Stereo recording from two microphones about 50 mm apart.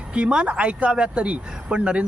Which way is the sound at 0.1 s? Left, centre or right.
Right.